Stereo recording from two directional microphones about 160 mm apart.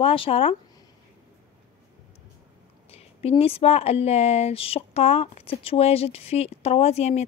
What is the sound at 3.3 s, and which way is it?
Speech, 35° left (ahead or behind).